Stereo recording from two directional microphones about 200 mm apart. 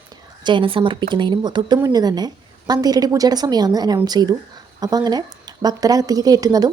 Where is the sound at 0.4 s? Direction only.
25° right (ahead or behind).